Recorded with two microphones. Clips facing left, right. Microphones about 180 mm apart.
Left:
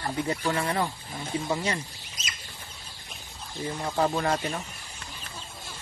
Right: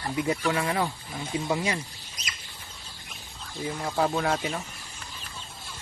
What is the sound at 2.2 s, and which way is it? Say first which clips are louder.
Rodents: even; 25° left (ahead or behind).